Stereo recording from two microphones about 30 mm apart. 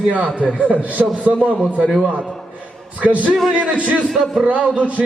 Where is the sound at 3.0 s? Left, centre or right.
Right.